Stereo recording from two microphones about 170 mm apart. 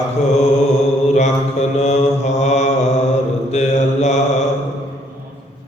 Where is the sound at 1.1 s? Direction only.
45° left (ahead or behind).